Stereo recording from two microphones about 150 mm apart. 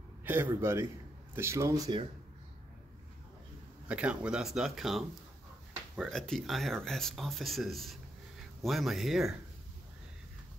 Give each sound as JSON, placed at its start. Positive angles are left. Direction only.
{"t": 0.2, "sound": "a man's voice", "side_deg": -15}
{"t": 3.8, "sound": "speech", "side_deg": -5}
{"t": 6.0, "sound": "speech", "side_deg": 5}